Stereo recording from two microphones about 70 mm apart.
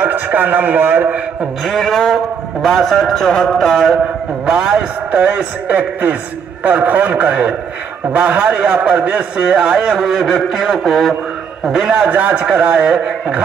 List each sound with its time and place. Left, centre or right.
0.0 s a man's voice: right
1.6 s a man's voice: centre
4.5 s a man's voice: centre